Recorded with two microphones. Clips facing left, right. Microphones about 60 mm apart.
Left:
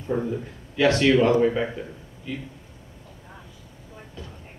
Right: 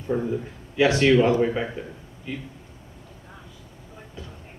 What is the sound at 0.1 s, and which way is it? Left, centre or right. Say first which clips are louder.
Speech: even; centre.